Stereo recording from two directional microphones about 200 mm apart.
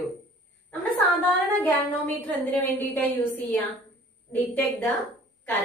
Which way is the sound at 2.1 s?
10° left (ahead or behind).